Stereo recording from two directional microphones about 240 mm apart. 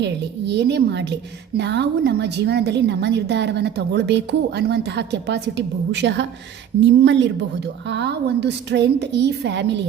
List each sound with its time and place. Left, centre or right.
0.0 s a woman's voice: right